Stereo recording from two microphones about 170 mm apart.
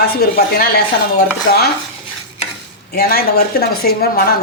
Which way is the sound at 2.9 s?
65° left (ahead or behind).